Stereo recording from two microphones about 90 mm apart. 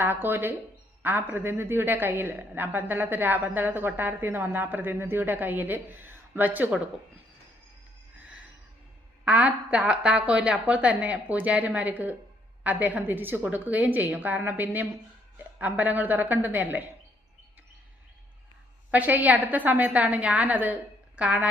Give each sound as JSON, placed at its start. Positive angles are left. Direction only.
{"t": 0.0, "sound": "a woman's voice", "side_deg": -25}
{"t": 9.2, "sound": "a woman's voice", "side_deg": -15}
{"t": 18.9, "sound": "a woman's voice", "side_deg": -20}